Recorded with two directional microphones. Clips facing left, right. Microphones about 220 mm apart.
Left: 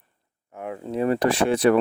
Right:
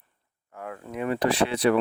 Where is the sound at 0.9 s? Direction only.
35° left (ahead or behind).